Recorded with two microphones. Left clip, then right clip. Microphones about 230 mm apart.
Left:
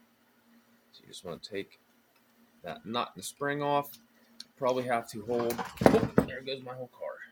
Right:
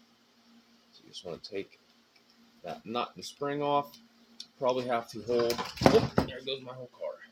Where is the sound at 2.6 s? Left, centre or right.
Left.